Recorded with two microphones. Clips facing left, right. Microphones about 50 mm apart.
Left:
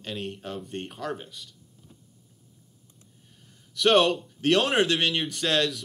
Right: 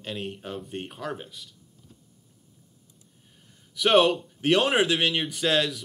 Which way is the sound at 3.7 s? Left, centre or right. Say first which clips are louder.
Right 1 dB; centre.